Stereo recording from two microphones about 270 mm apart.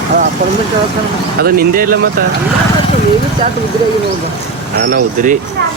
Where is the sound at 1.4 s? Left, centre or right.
Right.